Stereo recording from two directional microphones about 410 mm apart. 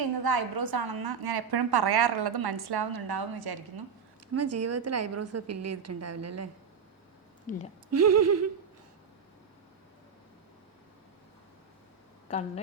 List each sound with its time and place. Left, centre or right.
0.0 s a woman's voice: right
4.4 s a woman's voice: right
7.5 s speech: centre
7.9 s a woman's voice: right
12.3 s speech: centre